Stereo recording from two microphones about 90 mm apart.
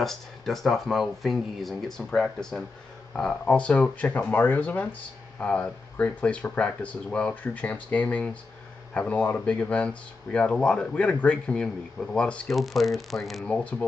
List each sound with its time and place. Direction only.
0.0 s speech: 5° left (ahead or behind)
13.5 s speech: 15° left (ahead or behind)